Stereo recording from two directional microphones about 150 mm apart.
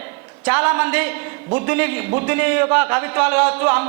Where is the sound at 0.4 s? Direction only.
10° right (ahead or behind).